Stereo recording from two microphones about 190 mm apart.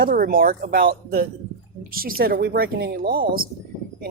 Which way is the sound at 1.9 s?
50° right (ahead or behind).